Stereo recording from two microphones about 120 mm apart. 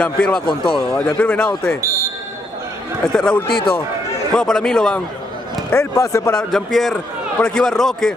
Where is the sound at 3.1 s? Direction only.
5° left (ahead or behind).